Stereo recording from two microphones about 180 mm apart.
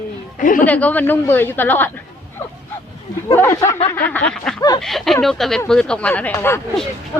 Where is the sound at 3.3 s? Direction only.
15° left (ahead or behind).